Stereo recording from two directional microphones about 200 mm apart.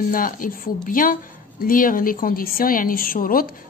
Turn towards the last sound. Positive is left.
turn(degrees=45)  # may be behind; listen again after turning